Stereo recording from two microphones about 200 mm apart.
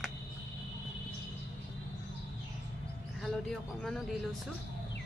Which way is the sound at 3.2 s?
Centre (ahead or behind).